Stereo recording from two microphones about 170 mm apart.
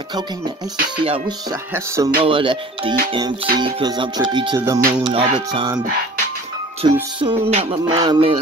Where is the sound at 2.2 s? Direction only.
30° right (ahead or behind).